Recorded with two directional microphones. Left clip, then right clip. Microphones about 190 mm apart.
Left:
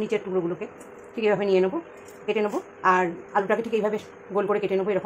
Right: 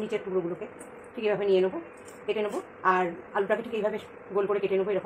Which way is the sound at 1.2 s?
45° left (ahead or behind).